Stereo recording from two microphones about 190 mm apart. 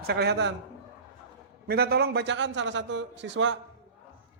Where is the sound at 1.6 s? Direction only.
55° right (ahead or behind); by 3.5 s 70° right (ahead or behind).